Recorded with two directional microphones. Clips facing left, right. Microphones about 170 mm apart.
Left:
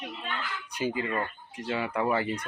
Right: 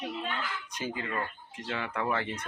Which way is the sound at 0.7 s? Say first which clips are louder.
Left 6 dB; 15° left (ahead or behind).